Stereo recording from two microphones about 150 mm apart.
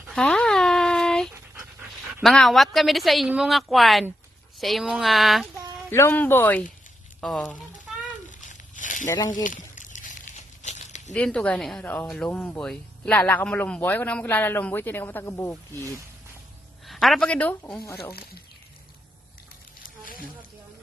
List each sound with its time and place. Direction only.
0.1 s a sound: 5° left (ahead or behind)
1.8 s dog: 10° right (ahead or behind)
2.2 s a woman's voice: centre (ahead or behind)
5.9 s speech: 15° left (ahead or behind)
7.2 s a woman's voice: centre (ahead or behind)
8.3 s a sound: 55° left (ahead or behind)
9.0 s speech: 25° left (ahead or behind)
9.3 s a sound: 60° left (ahead or behind)
11.1 s speech: 5° left (ahead or behind)
16.8 s a woman's voice: centre (ahead or behind)